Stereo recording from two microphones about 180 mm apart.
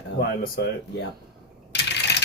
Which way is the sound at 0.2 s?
60° left (ahead or behind).